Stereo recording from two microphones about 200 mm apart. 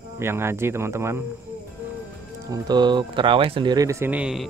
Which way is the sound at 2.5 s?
20° right (ahead or behind).